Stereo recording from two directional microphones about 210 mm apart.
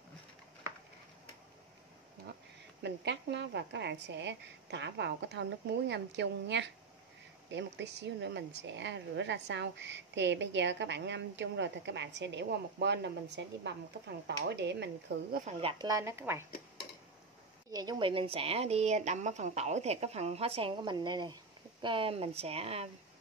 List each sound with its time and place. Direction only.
2.8 s speech: 55° right (ahead or behind)
15.3 s speech: 35° right (ahead or behind)
15.8 s speech: 15° right (ahead or behind)
17.6 s a woman's voice: 20° right (ahead or behind)